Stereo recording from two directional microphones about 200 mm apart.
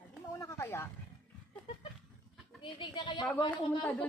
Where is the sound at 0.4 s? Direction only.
15° left (ahead or behind).